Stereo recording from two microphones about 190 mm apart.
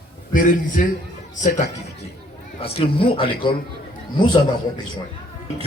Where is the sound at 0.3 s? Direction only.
45° left (ahead or behind).